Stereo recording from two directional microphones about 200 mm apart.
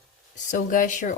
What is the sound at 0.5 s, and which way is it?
Speech, 40° left (ahead or behind).